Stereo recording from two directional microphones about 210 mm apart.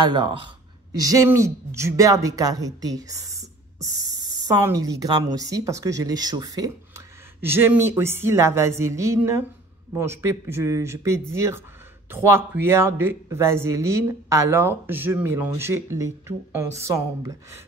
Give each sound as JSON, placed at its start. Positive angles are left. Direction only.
{"t": 0.0, "sound": "speech", "side_deg": -20}